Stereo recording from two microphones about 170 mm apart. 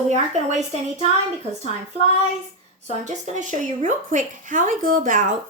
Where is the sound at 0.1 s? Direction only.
45° right (ahead or behind).